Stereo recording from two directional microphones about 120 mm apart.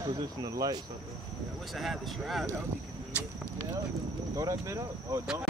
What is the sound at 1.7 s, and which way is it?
Music, centre (ahead or behind).